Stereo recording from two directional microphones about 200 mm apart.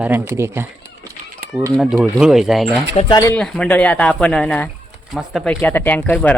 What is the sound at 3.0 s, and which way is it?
Speech, 20° left (ahead or behind).